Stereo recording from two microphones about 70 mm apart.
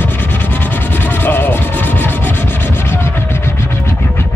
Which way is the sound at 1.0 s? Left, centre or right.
Left.